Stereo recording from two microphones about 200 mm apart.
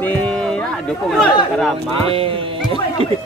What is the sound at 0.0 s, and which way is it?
Chatter, 10° left (ahead or behind).